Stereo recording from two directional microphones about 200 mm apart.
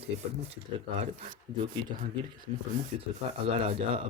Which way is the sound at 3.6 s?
30° right (ahead or behind).